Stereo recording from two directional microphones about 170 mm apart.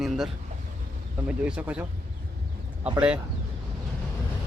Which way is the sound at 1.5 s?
5° right (ahead or behind).